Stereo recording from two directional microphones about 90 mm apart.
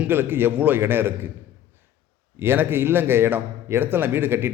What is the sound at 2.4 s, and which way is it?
A man's voice, 25° right (ahead or behind).